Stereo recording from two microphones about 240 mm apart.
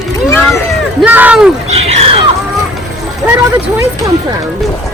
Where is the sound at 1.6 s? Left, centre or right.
Right.